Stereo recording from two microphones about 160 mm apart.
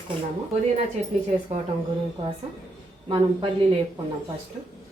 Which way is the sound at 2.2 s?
35° right (ahead or behind).